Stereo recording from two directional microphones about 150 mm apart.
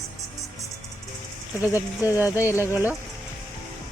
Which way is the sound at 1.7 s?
10° right (ahead or behind).